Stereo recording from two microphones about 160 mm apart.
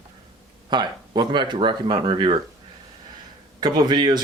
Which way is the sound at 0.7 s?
25° right (ahead or behind).